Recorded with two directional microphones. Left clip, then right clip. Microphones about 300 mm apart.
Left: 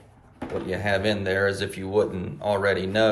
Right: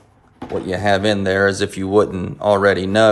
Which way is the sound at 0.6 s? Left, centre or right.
Centre.